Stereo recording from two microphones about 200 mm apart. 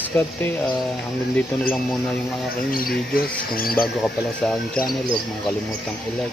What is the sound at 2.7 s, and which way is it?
Speech, 45° left (ahead or behind).